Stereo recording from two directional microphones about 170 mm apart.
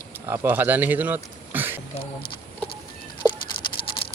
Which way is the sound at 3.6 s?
30° left (ahead or behind).